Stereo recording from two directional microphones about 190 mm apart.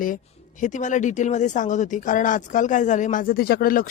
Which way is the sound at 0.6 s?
40° left (ahead or behind).